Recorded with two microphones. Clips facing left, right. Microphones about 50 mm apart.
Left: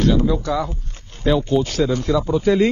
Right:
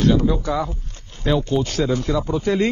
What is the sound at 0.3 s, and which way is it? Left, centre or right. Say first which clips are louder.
Speech: left 1 dB; centre.